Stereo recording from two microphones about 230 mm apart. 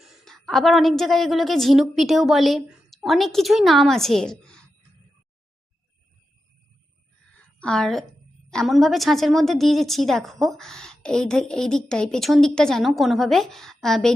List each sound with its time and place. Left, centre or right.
0.0 s a woman's voice: centre
7.6 s a woman's voice: centre